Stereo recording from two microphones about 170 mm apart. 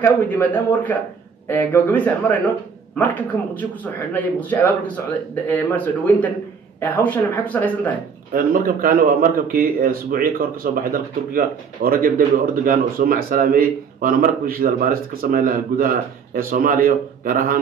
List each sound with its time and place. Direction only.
0.0 s speech: 10° left (ahead or behind)
8.3 s a man's voice: 55° right (ahead or behind)